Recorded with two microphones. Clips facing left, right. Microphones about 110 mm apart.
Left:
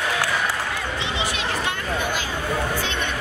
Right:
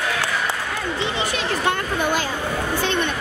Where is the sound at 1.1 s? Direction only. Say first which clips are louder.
Right 2 dB; 50° right (ahead or behind).